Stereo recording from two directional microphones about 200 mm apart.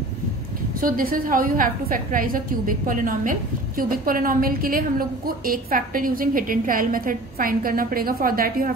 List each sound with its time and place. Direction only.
0.7 s a woman's voice: 45° right (ahead or behind)